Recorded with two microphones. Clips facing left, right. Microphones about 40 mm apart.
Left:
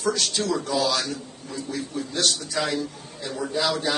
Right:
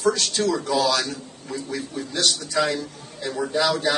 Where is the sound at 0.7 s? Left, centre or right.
Right.